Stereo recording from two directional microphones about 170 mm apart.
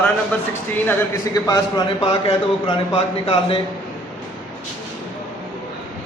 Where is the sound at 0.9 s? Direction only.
20° left (ahead or behind).